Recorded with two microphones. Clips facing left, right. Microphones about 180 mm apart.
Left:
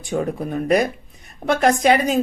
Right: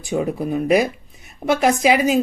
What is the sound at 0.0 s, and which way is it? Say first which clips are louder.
Speech: right 1 dB; 5° right (ahead or behind).